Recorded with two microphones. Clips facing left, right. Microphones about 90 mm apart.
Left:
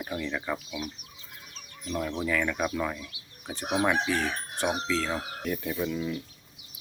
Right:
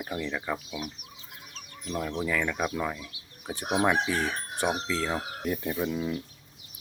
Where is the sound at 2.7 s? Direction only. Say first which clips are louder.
Even; 10° right (ahead or behind).